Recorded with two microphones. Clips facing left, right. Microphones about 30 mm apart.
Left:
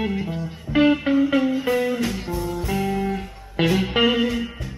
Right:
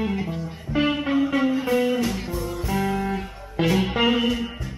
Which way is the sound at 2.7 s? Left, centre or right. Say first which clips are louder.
Right 1 dB; centre.